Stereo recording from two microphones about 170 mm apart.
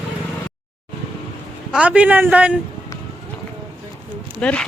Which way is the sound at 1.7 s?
5° right (ahead or behind).